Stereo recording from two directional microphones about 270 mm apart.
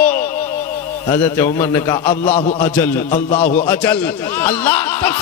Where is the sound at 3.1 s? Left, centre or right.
Left.